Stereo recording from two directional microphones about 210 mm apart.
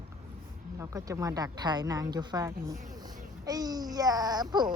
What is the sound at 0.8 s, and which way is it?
Speech, 15° right (ahead or behind).